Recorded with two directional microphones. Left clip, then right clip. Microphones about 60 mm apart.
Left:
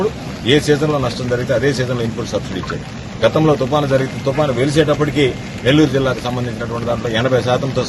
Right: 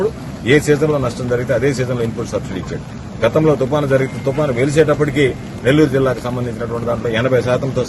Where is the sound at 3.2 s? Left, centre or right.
Centre.